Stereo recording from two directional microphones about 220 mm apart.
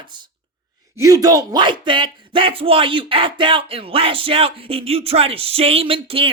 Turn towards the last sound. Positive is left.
turn(degrees=-25)  # may be behind; listen again after turning